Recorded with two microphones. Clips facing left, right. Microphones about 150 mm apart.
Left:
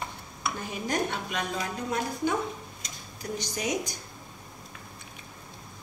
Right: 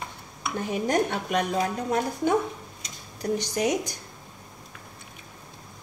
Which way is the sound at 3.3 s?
65° right (ahead or behind).